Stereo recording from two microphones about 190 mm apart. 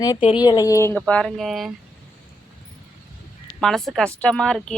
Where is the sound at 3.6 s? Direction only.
Centre (ahead or behind).